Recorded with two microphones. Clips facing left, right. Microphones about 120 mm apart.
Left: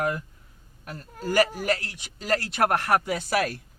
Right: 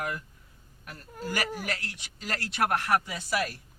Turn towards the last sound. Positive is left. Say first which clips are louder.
# left 5 dB
turn(degrees=65)  # may be behind; listen again after turning